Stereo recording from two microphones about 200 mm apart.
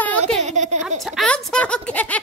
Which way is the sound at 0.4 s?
35° right (ahead or behind).